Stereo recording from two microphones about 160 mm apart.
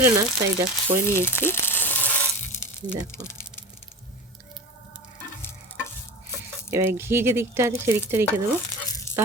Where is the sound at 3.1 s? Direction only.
15° left (ahead or behind).